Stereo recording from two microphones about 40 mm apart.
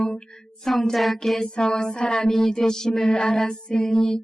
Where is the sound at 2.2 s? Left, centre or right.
Centre.